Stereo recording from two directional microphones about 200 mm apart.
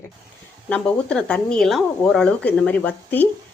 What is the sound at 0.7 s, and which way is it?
A woman's voice, 5° left (ahead or behind).